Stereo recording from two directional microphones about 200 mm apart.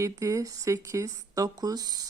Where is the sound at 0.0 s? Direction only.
15° right (ahead or behind).